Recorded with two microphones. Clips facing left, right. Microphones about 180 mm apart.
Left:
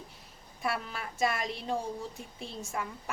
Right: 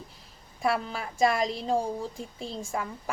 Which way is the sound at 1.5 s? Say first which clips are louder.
Right 6 dB; 30° right (ahead or behind).